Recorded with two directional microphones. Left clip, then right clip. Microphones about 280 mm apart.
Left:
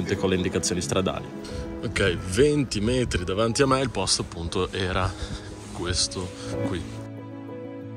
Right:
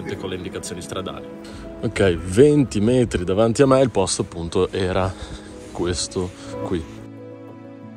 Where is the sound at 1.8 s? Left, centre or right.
Centre.